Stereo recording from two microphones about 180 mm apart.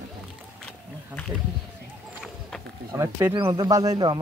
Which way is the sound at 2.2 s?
5° left (ahead or behind).